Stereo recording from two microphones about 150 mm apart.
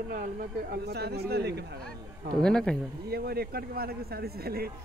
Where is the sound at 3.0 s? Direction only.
90° right.